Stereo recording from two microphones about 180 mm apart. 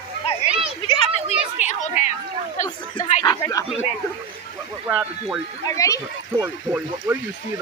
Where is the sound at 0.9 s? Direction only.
35° left (ahead or behind).